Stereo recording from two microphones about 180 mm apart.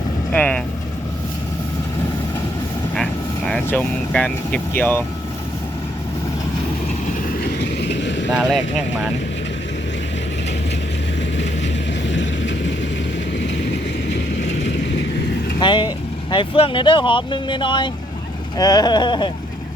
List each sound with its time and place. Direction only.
0.3 s speech: 5° left (ahead or behind)
2.9 s vehicle: 5° left (ahead or behind)
4.8 s speech: 10° left (ahead or behind)
7.1 s vehicle: 50° left (ahead or behind); by 8.3 s 80° left
8.3 s speech: 5° right (ahead or behind)
11.3 s vehicle: 85° left
13.4 s vehicle: 75° left (ahead or behind)
15.6 s speech: 25° left (ahead or behind)